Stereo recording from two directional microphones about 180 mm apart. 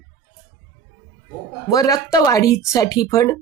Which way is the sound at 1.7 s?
20° left (ahead or behind).